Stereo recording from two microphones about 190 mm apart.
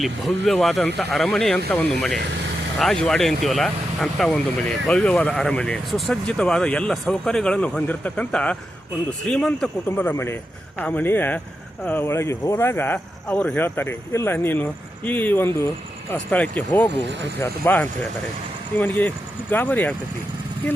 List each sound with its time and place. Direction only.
0.0 s speech: centre (ahead or behind)
16.9 s speech: 65° right (ahead or behind)
17.4 s speech: 10° left (ahead or behind)